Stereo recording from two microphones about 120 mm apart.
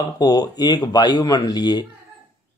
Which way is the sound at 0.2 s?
35° left (ahead or behind).